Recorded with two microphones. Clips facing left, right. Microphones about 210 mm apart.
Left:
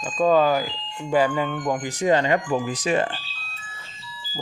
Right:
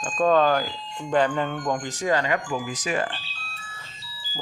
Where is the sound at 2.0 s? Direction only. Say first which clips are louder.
Left 5 dB; 25° left (ahead or behind).